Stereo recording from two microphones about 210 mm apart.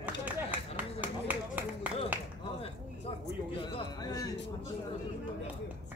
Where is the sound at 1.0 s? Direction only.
10° right (ahead or behind).